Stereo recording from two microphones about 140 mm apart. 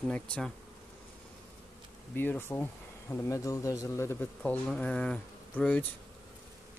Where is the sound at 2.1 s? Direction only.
15° left (ahead or behind).